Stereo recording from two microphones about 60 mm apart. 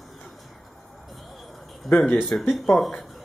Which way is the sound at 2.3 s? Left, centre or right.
Centre.